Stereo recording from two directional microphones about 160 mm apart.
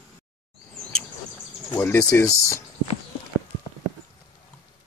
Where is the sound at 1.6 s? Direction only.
15° left (ahead or behind).